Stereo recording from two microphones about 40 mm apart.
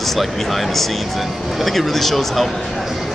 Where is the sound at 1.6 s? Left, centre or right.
Centre.